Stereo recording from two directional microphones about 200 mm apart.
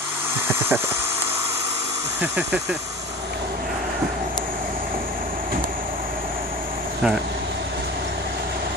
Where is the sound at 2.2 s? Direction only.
5° right (ahead or behind).